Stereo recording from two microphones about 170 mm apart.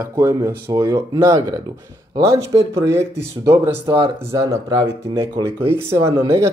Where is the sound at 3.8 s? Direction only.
30° right (ahead or behind).